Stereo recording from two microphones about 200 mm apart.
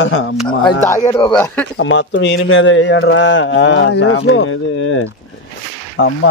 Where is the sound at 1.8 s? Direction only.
65° left (ahead or behind).